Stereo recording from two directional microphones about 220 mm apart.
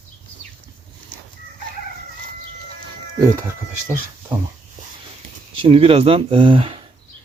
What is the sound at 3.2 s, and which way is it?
Speech, 10° right (ahead or behind).